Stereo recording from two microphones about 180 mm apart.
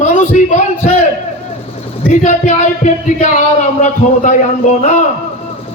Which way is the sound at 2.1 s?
40° left (ahead or behind).